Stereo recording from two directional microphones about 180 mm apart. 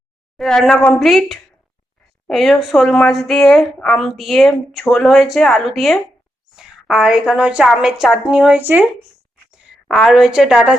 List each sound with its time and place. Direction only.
0.3 s a woman's voice: centre (ahead or behind)